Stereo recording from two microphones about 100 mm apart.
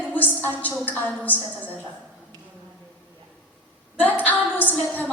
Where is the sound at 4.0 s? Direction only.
15° left (ahead or behind).